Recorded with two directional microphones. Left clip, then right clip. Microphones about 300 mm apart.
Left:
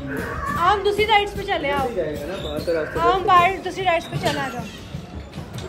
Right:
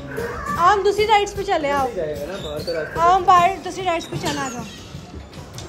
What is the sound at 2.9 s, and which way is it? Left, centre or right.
Speech, centre.